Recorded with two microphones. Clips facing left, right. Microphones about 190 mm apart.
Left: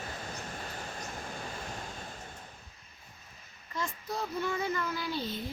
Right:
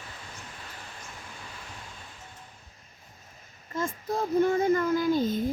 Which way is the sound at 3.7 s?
45° right (ahead or behind).